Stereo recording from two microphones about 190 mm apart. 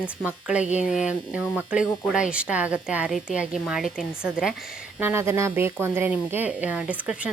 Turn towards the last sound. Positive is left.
turn(degrees=-5)  # may be behind; listen again after turning